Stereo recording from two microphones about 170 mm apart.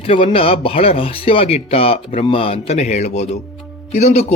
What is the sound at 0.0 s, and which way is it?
A man's voice, 30° left (ahead or behind).